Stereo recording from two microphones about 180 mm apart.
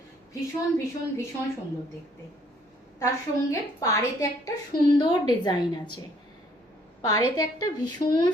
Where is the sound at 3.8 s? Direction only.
20° left (ahead or behind).